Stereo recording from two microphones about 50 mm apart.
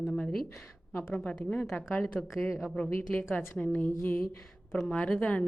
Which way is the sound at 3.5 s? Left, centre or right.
Left.